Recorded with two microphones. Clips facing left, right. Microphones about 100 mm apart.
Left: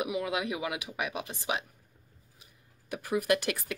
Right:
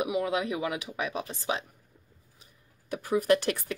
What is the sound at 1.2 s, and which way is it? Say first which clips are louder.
Speech: right 2 dB; 15° left (ahead or behind).